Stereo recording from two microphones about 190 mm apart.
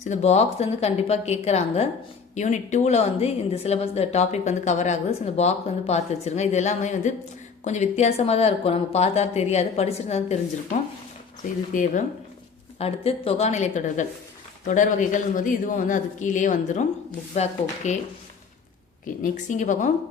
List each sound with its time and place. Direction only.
0.0 s a woman's voice: 35° left (ahead or behind)
12.8 s a woman's voice: 30° left (ahead or behind)
19.2 s a woman's voice: 40° left (ahead or behind)